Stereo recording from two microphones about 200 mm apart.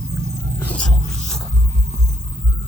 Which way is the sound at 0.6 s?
5° left (ahead or behind).